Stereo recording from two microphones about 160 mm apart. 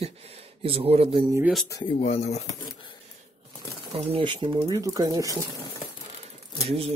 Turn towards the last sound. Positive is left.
turn(degrees=-40)  # may be behind; listen again after turning